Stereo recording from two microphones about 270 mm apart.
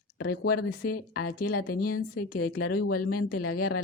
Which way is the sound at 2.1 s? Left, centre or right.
Left.